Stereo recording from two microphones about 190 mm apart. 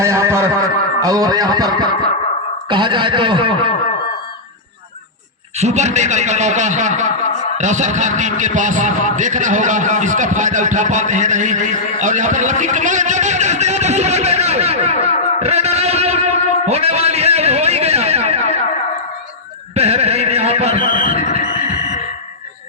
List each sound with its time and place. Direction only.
0.0 s a sound: 15° right (ahead or behind)
1.0 s speech: 20° right (ahead or behind)
5.5 s a man's voice: 35° right (ahead or behind)
15.4 s music: 35° right (ahead or behind)
19.7 s carnatic music: 35° right (ahead or behind)
20.8 s a sound: 45° left (ahead or behind)